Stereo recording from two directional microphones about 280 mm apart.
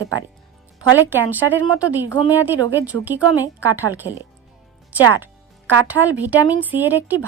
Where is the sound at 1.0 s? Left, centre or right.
Centre.